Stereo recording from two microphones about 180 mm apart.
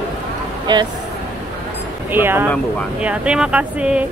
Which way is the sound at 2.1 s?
10° right (ahead or behind).